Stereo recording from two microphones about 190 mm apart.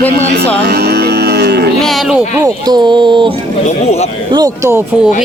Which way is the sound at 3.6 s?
35° left (ahead or behind).